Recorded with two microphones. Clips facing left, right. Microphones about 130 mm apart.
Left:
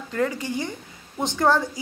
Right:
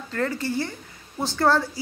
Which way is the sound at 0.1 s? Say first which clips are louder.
Left 1 dB; 15° left (ahead or behind).